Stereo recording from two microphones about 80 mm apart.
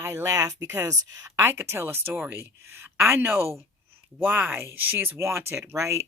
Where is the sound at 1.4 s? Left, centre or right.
Right.